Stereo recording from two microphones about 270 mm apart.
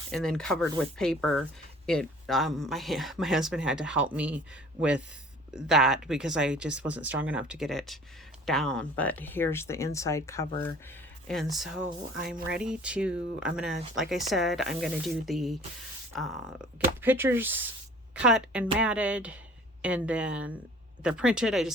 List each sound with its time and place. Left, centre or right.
0.1 s speech: centre
11.3 s speech: centre